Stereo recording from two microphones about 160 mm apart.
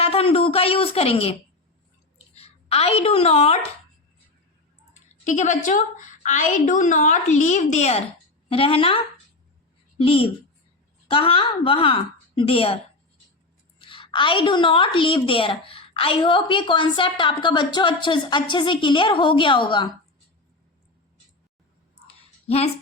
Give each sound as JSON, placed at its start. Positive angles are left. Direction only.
{"t": 0.0, "sound": "a woman's voice", "side_deg": 35}
{"t": 5.2, "sound": "a woman's voice", "side_deg": 50}
{"t": 22.4, "sound": "speech", "side_deg": 40}